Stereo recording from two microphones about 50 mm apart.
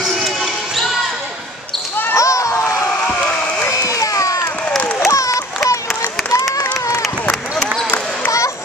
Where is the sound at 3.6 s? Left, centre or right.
Left.